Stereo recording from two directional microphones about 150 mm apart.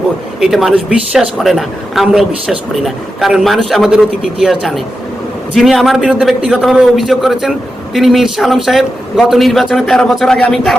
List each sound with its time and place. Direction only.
0.3 s a woman's voice: centre (ahead or behind)